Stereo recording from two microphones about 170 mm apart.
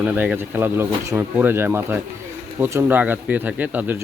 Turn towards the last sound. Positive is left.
turn(degrees=-10)  # may be behind; listen again after turning